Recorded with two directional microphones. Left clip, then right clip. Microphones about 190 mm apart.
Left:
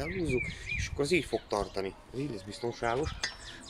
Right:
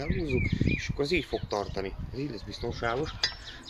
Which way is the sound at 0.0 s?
10° left (ahead or behind).